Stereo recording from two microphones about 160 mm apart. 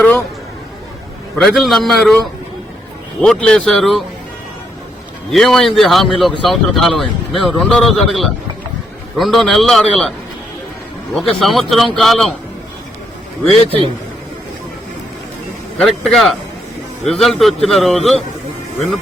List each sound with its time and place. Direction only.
1.4 s speech: centre (ahead or behind)
5.3 s speech: centre (ahead or behind)
11.1 s speech: centre (ahead or behind)
13.7 s a man's voice: 35° right (ahead or behind)
15.8 s speech: centre (ahead or behind)